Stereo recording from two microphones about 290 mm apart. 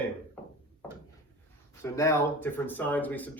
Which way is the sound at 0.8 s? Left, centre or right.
Centre.